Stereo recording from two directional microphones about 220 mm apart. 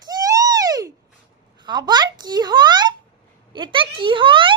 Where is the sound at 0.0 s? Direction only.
15° right (ahead or behind).